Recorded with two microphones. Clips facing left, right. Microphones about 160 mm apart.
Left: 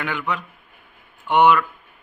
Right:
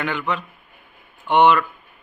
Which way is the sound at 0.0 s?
10° left (ahead or behind).